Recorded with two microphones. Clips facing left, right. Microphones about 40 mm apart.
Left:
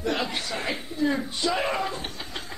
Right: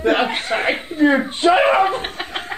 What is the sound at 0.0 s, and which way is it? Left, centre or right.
Chant, right.